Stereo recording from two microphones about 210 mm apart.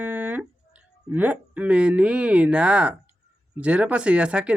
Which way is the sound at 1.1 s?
10° right (ahead or behind).